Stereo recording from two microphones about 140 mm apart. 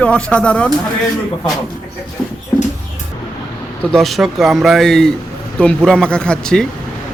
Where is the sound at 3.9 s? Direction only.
Centre (ahead or behind).